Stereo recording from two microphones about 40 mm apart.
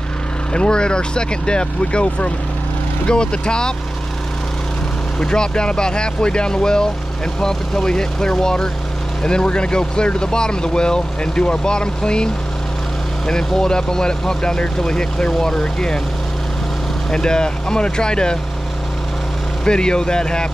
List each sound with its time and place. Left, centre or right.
0.5 s speech: left
5.2 s speech: left
13.3 s speech: centre
17.1 s speech: centre
19.6 s speech: left